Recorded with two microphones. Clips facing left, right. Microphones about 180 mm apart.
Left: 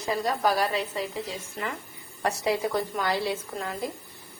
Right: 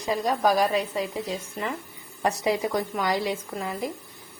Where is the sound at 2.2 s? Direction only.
20° right (ahead or behind).